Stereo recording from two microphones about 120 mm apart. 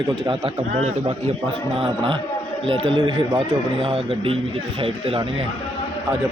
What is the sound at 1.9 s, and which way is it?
Speech, 45° right (ahead or behind).